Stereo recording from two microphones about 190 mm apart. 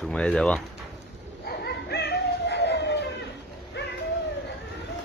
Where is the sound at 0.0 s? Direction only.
5° left (ahead or behind).